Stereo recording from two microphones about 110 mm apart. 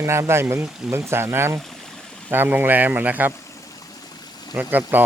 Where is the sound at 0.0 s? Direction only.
25° right (ahead or behind).